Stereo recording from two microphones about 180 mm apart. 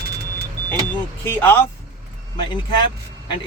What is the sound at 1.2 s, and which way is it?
Speech, 10° left (ahead or behind).